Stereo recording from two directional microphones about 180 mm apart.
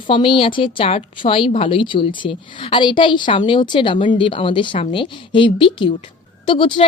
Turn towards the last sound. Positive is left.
turn(degrees=30)  # may be behind; listen again after turning